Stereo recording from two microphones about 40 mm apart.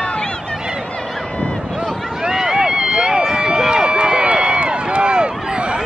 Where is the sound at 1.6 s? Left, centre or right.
Centre.